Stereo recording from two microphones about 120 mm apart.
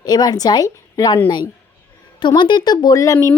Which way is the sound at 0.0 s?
35° left (ahead or behind).